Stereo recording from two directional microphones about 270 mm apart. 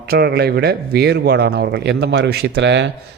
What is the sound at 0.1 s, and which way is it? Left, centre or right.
Speech, right.